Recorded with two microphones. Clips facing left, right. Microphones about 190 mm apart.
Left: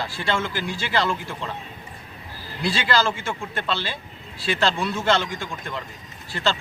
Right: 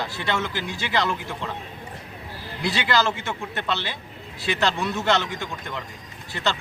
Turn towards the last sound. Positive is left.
turn(degrees=-20)  # may be behind; listen again after turning